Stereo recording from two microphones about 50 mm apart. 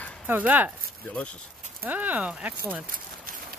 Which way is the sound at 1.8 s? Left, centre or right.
Right.